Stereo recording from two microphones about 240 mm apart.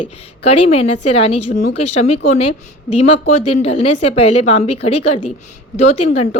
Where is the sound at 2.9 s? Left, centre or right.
Left.